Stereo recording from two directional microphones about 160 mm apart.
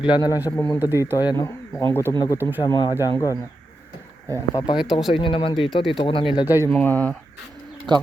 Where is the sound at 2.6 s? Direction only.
25° left (ahead or behind).